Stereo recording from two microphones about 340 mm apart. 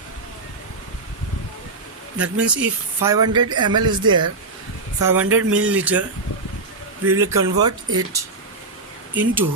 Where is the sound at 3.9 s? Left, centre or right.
Centre.